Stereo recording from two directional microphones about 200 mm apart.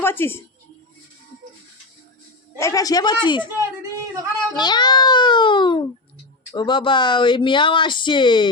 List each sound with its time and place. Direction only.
0.0 s a woman's voice: 10° left (ahead or behind)
2.6 s a woman's voice: 15° left (ahead or behind)
4.0 s speech: 15° right (ahead or behind)
4.5 s speech: 20° left (ahead or behind)